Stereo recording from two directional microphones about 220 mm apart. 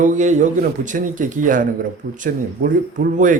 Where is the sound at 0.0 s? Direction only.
35° right (ahead or behind).